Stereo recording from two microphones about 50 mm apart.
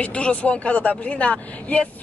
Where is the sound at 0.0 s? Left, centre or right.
Left.